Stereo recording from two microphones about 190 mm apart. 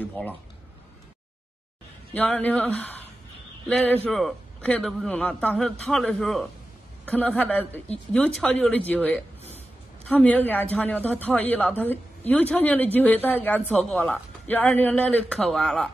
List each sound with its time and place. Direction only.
2.1 s a man's voice: 10° left (ahead or behind)